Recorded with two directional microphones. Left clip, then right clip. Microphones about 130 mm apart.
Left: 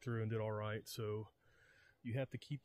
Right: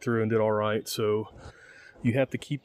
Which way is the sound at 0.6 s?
15° left (ahead or behind).